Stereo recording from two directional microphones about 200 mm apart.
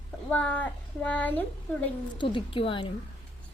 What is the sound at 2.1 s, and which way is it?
Speech, 25° left (ahead or behind).